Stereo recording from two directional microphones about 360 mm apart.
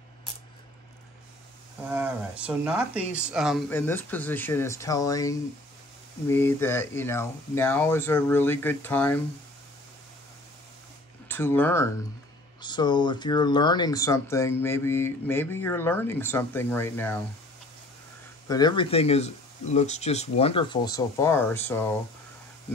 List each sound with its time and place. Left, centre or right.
1.9 s speech: centre
11.2 s speech: centre
18.5 s speech: centre